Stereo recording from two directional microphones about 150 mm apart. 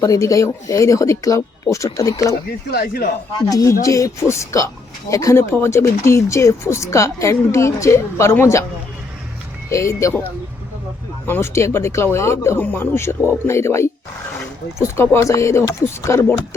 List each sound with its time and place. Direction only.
0.0 s speech: 20° left (ahead or behind)
2.6 s speech: 90° left
3.4 s speech: 20° left (ahead or behind)
9.6 s speech: 20° left (ahead or behind)
11.3 s speech: 15° left (ahead or behind)